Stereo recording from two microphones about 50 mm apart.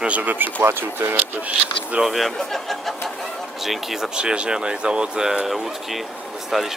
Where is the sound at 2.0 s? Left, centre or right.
Centre.